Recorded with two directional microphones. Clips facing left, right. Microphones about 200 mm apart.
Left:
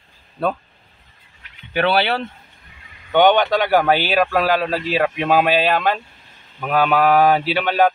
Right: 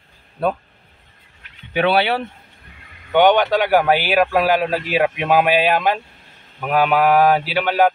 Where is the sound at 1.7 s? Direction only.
15° right (ahead or behind).